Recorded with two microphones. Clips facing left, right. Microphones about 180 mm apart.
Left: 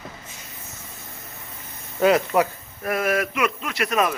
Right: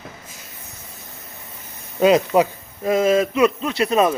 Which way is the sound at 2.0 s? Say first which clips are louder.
Right 3 dB; 20° right (ahead or behind).